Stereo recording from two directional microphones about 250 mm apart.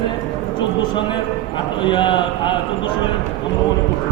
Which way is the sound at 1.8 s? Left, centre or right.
Centre.